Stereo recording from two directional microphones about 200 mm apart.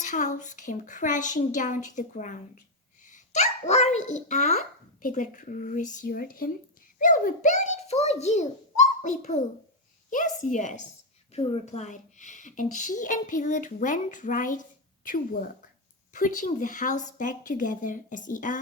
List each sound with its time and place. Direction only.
0.0 s a woman's voice: 40° left (ahead or behind)